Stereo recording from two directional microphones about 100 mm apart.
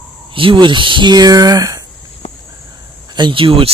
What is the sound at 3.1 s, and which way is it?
Speech, 50° right (ahead or behind).